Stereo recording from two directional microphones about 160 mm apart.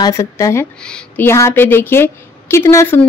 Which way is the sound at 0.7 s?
5° left (ahead or behind).